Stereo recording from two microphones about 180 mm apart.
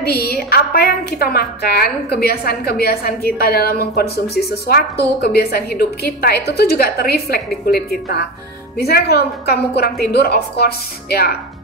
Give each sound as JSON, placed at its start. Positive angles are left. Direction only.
{"t": 0.0, "sound": "a woman's voice", "side_deg": 60}